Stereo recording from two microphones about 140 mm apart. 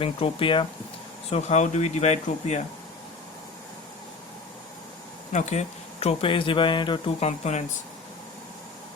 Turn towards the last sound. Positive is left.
turn(degrees=55)  # may be behind; listen again after turning